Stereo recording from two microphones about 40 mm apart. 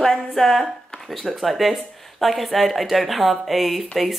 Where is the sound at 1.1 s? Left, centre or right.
Centre.